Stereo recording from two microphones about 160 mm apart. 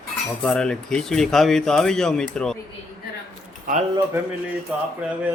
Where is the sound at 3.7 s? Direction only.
60° right (ahead or behind).